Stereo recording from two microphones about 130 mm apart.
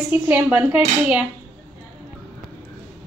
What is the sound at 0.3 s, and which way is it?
Speech, 10° right (ahead or behind).